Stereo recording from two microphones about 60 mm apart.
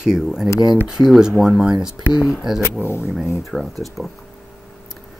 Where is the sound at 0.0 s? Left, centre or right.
Centre.